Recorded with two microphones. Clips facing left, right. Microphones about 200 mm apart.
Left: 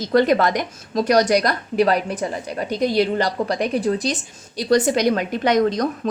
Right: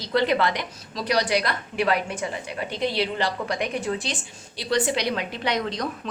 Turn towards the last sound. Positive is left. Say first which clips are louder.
# left 9 dB
turn(degrees=45)  # may be behind; listen again after turning